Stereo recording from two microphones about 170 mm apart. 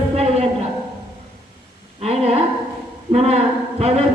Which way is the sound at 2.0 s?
35° right (ahead or behind).